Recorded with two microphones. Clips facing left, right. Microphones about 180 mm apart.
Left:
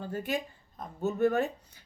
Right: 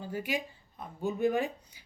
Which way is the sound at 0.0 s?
10° right (ahead or behind).